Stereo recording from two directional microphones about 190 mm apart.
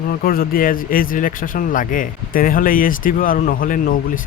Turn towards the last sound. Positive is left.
turn(degrees=45)  # may be behind; listen again after turning